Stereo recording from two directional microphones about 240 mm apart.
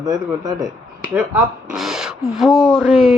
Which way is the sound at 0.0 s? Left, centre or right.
Centre.